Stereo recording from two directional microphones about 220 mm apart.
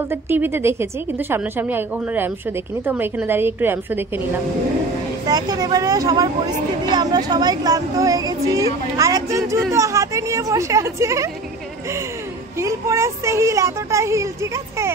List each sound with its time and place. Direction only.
0.1 s a woman's voice: 10° right (ahead or behind)
5.2 s a woman's voice: 15° right (ahead or behind)
12.5 s a woman's voice: 15° right (ahead or behind)